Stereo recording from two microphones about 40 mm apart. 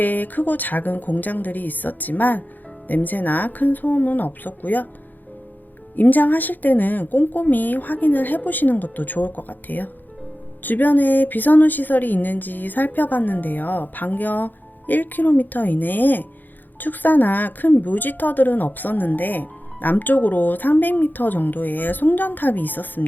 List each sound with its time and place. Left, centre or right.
0.0 s a woman's voice: left
6.0 s a woman's voice: left